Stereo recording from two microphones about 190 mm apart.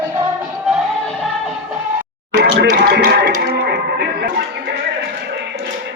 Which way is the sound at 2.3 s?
60° right (ahead or behind).